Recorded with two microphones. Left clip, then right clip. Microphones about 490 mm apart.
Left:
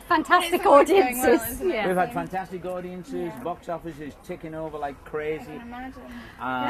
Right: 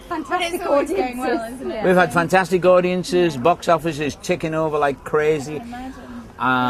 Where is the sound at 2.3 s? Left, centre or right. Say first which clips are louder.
Right 17 dB; right.